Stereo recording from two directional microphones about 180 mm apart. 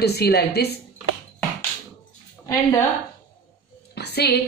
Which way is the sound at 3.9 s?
65° left (ahead or behind).